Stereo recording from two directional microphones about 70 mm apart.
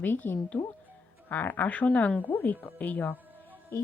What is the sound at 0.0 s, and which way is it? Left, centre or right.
Speech, left.